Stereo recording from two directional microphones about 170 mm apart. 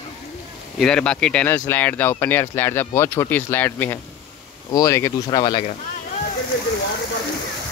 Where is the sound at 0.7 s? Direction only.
5° left (ahead or behind); by 5.6 s 25° left (ahead or behind).